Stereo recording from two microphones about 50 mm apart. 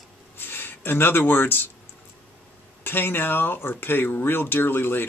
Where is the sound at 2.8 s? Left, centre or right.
Left.